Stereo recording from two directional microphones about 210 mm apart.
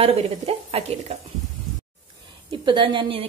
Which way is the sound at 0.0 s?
25° right (ahead or behind).